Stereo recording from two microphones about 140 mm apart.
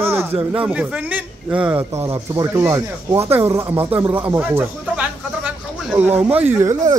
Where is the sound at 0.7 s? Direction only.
10° right (ahead or behind).